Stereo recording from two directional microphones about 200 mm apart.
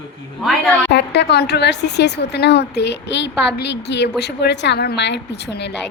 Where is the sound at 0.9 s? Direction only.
60° left (ahead or behind).